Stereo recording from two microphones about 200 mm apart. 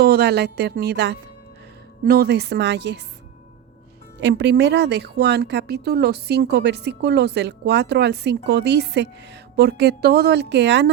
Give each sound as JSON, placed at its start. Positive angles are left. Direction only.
{"t": 0.0, "sound": "a woman's voice", "side_deg": -50}
{"t": 4.2, "sound": "speech", "side_deg": -60}